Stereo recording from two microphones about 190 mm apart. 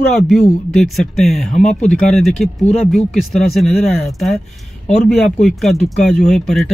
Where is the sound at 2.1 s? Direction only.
Centre (ahead or behind).